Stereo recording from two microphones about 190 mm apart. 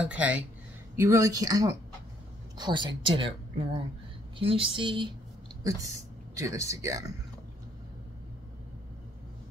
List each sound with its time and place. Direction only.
0.0 s a woman's voice: 5° right (ahead or behind); by 3.3 s 25° right (ahead or behind)
4.4 s a woman's voice: 30° right (ahead or behind)